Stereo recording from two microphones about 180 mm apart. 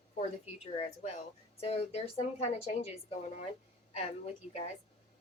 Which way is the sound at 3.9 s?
35° left (ahead or behind).